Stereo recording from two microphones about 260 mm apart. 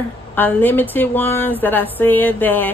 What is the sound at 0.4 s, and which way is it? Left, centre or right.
Speech, centre.